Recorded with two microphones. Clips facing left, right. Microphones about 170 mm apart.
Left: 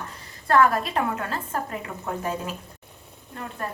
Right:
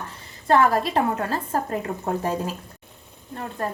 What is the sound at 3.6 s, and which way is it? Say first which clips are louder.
Speech: right 5 dB; 35° right (ahead or behind).